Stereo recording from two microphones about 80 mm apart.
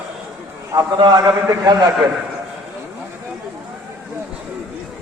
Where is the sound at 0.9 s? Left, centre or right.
Right.